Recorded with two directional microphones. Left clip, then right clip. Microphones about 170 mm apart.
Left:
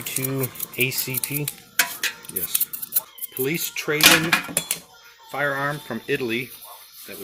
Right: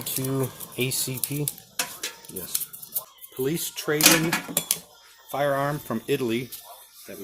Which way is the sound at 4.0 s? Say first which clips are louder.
Left 5 dB; 5° right (ahead or behind).